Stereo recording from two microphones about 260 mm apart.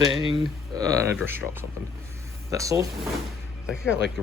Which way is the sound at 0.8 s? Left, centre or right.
Centre.